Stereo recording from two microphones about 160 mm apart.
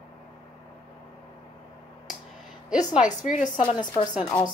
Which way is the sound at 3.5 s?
30° left (ahead or behind).